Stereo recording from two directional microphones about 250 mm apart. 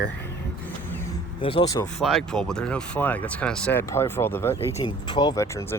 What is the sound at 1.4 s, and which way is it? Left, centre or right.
Speech, left.